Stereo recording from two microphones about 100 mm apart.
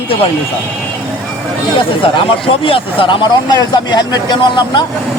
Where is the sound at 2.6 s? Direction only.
60° left (ahead or behind).